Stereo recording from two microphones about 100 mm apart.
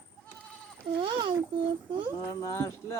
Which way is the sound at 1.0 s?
60° right (ahead or behind).